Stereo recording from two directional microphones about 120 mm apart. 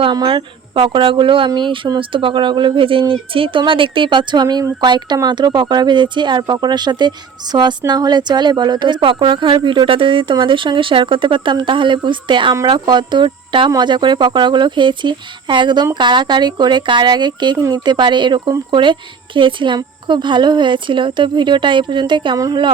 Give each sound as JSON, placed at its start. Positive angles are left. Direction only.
{"t": 0.0, "sound": "a woman's voice", "side_deg": -40}